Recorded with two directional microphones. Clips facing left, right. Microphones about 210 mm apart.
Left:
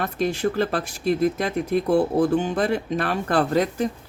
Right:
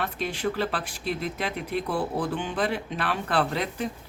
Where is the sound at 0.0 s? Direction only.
45° left (ahead or behind).